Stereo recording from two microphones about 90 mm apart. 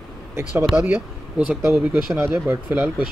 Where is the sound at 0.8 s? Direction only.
15° right (ahead or behind).